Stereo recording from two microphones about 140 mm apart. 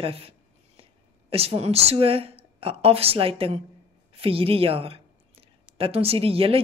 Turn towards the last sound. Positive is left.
turn(degrees=-40)  # may be behind; listen again after turning